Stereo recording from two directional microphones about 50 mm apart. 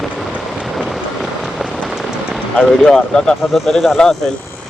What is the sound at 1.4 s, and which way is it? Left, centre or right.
Rain on surface, centre.